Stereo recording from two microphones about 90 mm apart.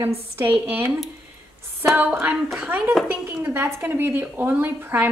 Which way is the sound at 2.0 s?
20° right (ahead or behind).